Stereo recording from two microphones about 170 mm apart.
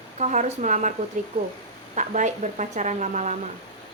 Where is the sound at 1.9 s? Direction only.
45° right (ahead or behind).